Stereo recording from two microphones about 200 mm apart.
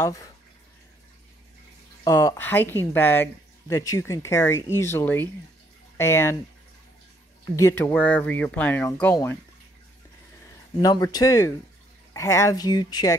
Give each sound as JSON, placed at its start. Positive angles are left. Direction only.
{"t": 0.0, "sound": "speech", "side_deg": 15}
{"t": 2.0, "sound": "speech", "side_deg": 15}
{"t": 7.5, "sound": "speech", "side_deg": 10}
{"t": 10.8, "sound": "speech", "side_deg": 20}